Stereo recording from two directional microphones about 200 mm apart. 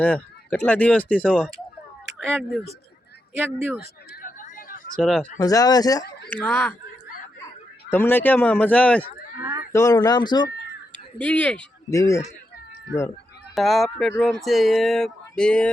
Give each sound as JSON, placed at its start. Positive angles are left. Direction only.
{"t": 0.0, "sound": "speech", "side_deg": 5}
{"t": 3.8, "sound": "a sound", "side_deg": 45}
{"t": 4.9, "sound": "speech", "side_deg": 5}
{"t": 5.4, "sound": "speech", "side_deg": 15}
{"t": 6.4, "sound": "speech", "side_deg": 5}
{"t": 7.9, "sound": "speech", "side_deg": 10}
{"t": 9.4, "sound": "a sound", "side_deg": -15}
{"t": 9.7, "sound": "speech", "side_deg": 15}
{"t": 11.2, "sound": "speech", "side_deg": 5}
{"t": 13.6, "sound": "speech", "side_deg": 0}